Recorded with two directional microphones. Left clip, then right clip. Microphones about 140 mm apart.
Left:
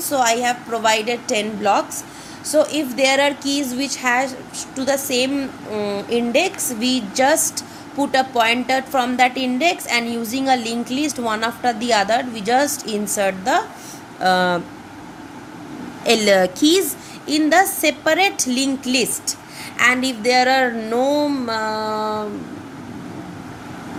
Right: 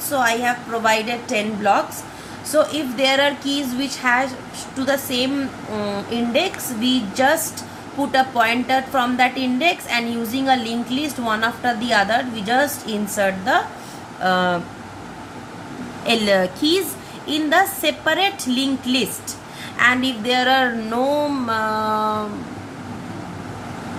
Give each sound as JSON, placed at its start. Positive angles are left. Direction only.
{"t": 0.1, "sound": "a woman's voice", "side_deg": 50}
{"t": 14.2, "sound": "speech", "side_deg": 65}
{"t": 16.0, "sound": "a woman's voice", "side_deg": 85}
{"t": 17.2, "sound": "a woman's voice", "side_deg": 55}